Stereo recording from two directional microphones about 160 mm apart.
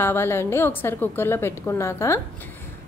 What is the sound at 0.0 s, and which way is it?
A woman's voice, 15° left (ahead or behind).